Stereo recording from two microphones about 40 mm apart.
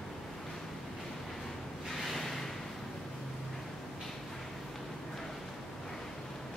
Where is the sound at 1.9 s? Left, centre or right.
Centre.